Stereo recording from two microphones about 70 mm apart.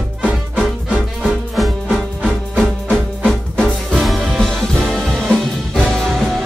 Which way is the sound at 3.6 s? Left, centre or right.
Centre.